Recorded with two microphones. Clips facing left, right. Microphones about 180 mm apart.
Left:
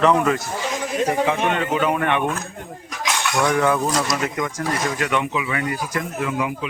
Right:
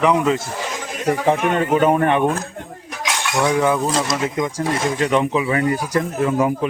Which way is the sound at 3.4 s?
15° right (ahead or behind).